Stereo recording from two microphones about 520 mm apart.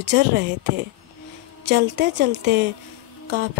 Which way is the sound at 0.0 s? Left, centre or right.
Centre.